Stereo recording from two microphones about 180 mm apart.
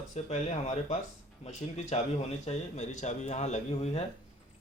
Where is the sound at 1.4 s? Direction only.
35° left (ahead or behind).